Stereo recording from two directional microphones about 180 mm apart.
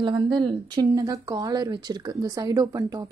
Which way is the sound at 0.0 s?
25° right (ahead or behind).